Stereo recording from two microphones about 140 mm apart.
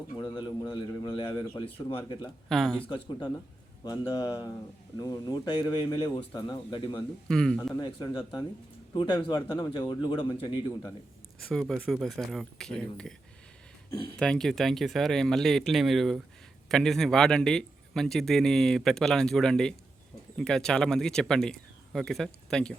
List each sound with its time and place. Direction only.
0.3 s a man's voice: 35° left (ahead or behind)
2.5 s speech: centre (ahead or behind)
2.8 s a man's voice: 35° left (ahead or behind)
7.3 s speech: 5° left (ahead or behind)
7.8 s a man's voice: 30° left (ahead or behind)
11.3 s speech: centre (ahead or behind)
14.2 s speech: 5° left (ahead or behind)